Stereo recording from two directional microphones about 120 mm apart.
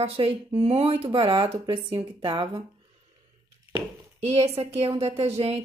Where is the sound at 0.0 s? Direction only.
55° right (ahead or behind); by 2.6 s 40° right (ahead or behind).